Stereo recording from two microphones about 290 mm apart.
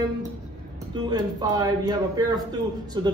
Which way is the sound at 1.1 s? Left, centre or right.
Centre.